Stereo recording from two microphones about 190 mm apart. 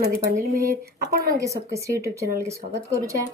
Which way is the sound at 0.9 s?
55° right (ahead or behind).